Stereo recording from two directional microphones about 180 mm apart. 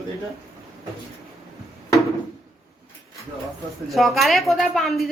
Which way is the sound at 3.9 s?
Centre (ahead or behind).